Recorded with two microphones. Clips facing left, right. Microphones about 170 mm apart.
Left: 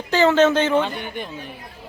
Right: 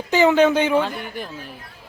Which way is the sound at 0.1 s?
15° right (ahead or behind).